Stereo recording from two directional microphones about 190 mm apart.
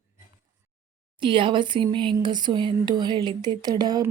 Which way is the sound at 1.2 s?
25° right (ahead or behind).